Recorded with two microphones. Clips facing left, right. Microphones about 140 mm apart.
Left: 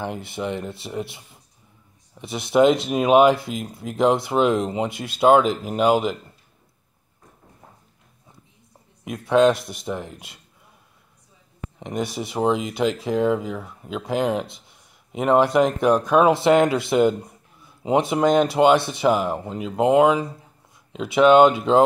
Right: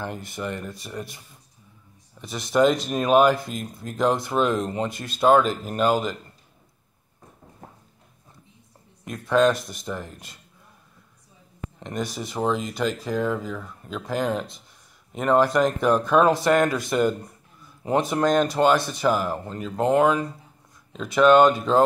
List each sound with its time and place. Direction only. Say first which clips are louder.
0.3 s speech: left 4 dB; 20° left (ahead or behind)
2.1 s speech: left 3 dB; 20° left (ahead or behind)
9.1 s speech: left 3 dB; 20° left (ahead or behind)
11.8 s speech: left 3 dB; 20° left (ahead or behind)
17.8 s speech: left 3 dB; 15° left (ahead or behind)